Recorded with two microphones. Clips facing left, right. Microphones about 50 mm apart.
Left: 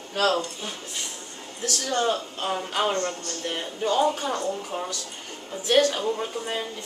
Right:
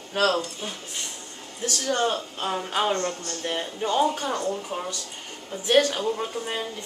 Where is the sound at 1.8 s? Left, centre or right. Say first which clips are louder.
Even; centre.